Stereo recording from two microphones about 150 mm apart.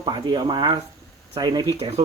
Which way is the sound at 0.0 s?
30° right (ahead or behind).